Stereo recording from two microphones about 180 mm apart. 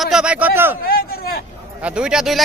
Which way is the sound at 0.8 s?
55° left (ahead or behind).